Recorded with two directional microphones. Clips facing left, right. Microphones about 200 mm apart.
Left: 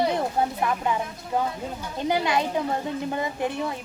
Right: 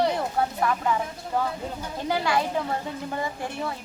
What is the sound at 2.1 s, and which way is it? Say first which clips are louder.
A child's voice: left 1 dB; 20° left (ahead or behind).